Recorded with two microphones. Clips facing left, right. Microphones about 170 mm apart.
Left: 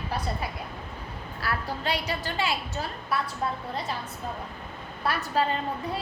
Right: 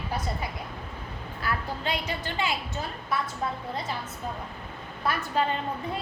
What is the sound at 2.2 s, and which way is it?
Speech, 20° right (ahead or behind).